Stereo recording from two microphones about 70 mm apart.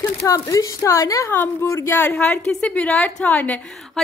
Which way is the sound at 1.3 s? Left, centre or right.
Left.